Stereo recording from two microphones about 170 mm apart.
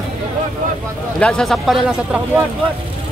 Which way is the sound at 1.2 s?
5° left (ahead or behind).